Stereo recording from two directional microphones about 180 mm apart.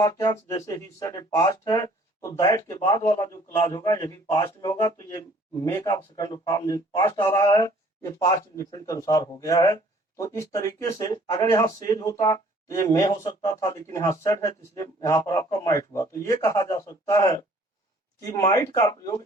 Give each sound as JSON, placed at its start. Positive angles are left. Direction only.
{"t": 0.0, "sound": "speech", "side_deg": 20}